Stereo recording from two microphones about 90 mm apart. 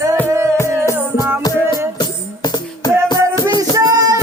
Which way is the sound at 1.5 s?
45° left (ahead or behind).